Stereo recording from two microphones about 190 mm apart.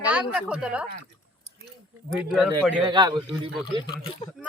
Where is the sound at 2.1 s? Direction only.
5° right (ahead or behind).